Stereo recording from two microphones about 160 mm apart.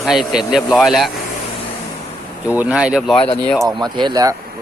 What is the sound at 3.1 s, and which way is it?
Speech, 35° left (ahead or behind).